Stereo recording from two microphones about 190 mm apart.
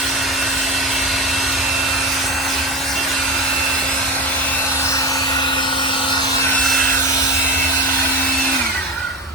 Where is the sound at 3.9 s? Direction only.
5° left (ahead or behind); by 6.2 s 25° left (ahead or behind).